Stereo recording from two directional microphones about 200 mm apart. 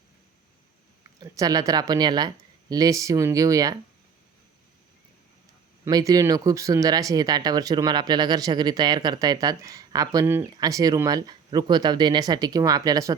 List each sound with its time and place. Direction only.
1.2 s speech: 15° right (ahead or behind)
5.8 s speech: 15° right (ahead or behind)